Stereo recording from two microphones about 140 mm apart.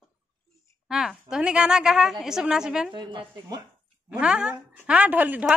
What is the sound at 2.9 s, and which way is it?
Speech, 35° right (ahead or behind).